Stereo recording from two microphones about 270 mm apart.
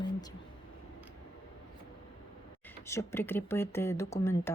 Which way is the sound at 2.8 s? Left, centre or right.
Centre.